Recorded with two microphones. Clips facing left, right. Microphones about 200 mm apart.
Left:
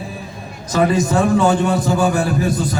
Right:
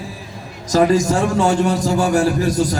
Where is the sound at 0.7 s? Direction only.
40° right (ahead or behind).